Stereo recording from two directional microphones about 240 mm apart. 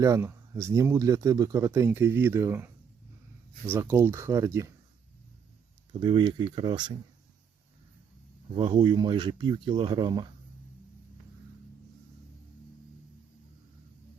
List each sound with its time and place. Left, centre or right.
0.0 s speech: centre
3.8 s speech: centre
5.9 s speech: centre
8.5 s speech: centre